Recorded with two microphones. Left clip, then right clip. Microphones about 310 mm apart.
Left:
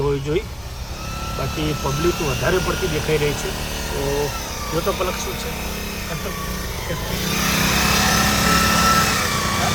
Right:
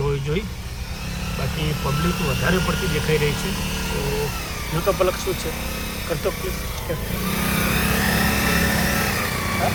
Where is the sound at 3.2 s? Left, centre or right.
Left.